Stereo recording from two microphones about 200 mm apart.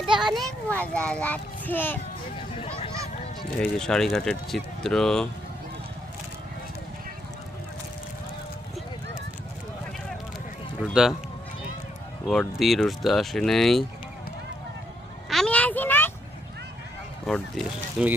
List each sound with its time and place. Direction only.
0.3 s a child's voice: 5° left (ahead or behind)
2.6 s a sound: 25° left (ahead or behind)
3.6 s speech: 5° left (ahead or behind)
10.8 s speech: centre (ahead or behind)
12.3 s speech: centre (ahead or behind)
15.3 s a sound: 5° left (ahead or behind)
17.2 s speech: centre (ahead or behind)